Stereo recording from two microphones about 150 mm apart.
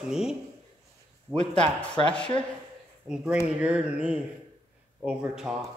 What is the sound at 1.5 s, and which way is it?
Speech, 10° left (ahead or behind).